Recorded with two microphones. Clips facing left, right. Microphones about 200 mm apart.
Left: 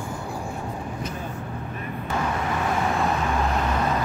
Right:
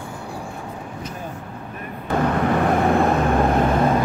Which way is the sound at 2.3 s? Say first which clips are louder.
Right 7 dB; 60° right (ahead or behind).